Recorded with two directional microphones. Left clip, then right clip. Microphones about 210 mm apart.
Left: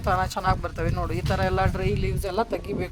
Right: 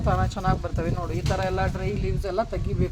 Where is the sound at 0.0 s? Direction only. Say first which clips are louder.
Left 2 dB; 55° left (ahead or behind).